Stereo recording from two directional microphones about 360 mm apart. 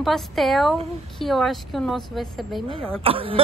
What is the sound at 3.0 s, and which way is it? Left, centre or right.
Speech, centre.